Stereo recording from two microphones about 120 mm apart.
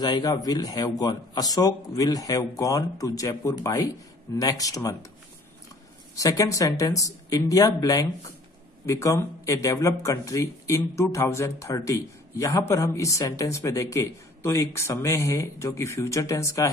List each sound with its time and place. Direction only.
0.0 s a man's voice: 35° left (ahead or behind)
6.1 s speech: 30° left (ahead or behind)